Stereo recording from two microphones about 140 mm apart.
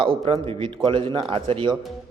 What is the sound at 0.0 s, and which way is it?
Speech, 40° right (ahead or behind).